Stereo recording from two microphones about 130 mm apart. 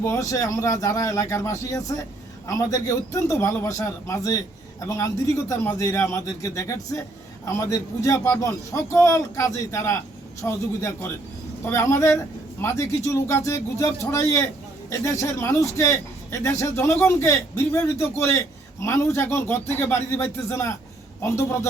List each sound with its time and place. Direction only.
0.0 s a man's voice: 20° left (ahead or behind)